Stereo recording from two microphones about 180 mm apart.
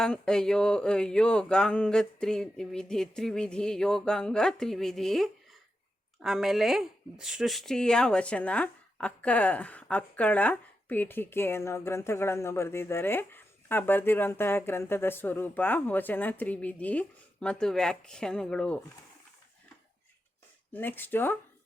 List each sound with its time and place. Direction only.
0.0 s a sound: 5° left (ahead or behind)
6.2 s speech: centre (ahead or behind)
20.7 s speech: 10° left (ahead or behind)